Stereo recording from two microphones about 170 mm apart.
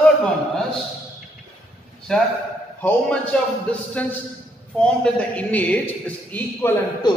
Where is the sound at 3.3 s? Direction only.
5° left (ahead or behind).